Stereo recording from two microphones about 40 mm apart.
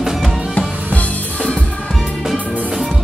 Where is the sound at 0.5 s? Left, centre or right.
Left.